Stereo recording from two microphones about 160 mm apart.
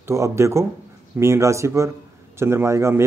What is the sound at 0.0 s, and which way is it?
Speech, 15° right (ahead or behind).